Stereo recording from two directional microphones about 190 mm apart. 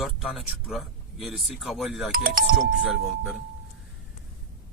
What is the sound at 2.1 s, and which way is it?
Speech, 50° right (ahead or behind).